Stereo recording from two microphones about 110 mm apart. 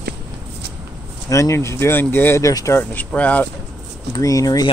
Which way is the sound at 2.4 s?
30° left (ahead or behind).